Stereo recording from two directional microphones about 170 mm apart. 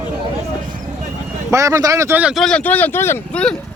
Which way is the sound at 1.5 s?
20° right (ahead or behind).